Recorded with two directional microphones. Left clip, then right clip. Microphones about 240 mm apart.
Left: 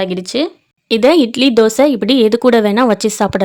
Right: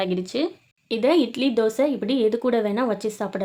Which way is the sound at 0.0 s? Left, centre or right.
Left.